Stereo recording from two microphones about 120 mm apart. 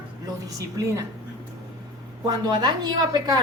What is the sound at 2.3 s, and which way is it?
A woman's voice, 35° right (ahead or behind).